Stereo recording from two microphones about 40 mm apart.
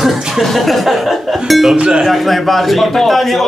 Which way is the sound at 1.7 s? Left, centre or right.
Right.